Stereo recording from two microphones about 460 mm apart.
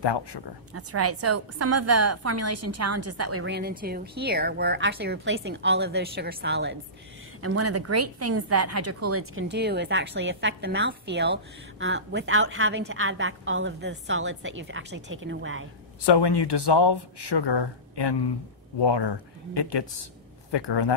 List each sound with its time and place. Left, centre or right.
0.0 s speech: left
0.7 s a woman's voice: right
16.0 s speech: left